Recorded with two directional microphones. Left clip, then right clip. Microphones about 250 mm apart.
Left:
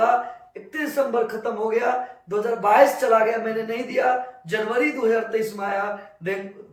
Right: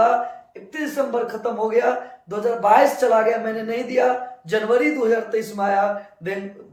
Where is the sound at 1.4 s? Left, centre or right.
Centre.